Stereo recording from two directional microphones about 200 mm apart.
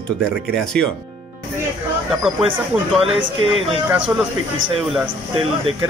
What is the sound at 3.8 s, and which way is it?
Speech, 5° right (ahead or behind).